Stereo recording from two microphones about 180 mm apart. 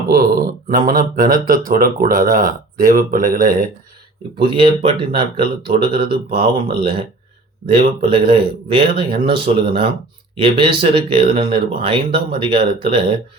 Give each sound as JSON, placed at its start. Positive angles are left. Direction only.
{"t": 0.1, "sound": "speech", "side_deg": -55}
{"t": 4.4, "sound": "speech", "side_deg": -30}